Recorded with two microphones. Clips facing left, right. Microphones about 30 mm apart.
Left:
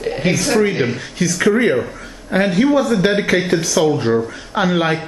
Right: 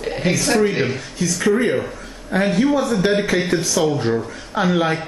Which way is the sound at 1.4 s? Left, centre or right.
Left.